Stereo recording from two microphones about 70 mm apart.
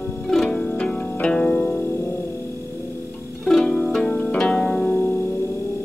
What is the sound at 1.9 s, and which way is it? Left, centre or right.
Music, left.